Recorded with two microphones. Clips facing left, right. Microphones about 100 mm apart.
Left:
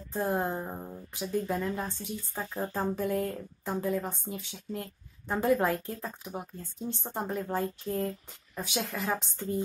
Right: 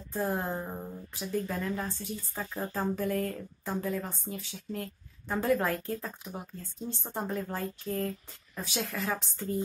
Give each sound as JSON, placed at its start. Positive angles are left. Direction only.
{"t": 0.1, "sound": "speech", "side_deg": 15}